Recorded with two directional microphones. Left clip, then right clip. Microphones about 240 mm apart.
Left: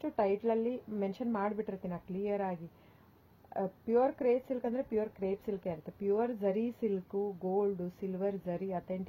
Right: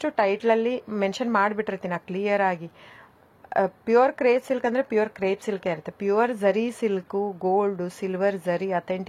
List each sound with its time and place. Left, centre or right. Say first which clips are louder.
0.0 s speech: right 9 dB; centre
3.5 s speech: right 11 dB; centre
7.1 s speech: right 11 dB; right
7.6 s speech: right 9 dB; centre